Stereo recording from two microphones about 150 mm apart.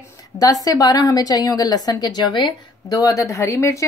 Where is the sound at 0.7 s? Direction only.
25° left (ahead or behind).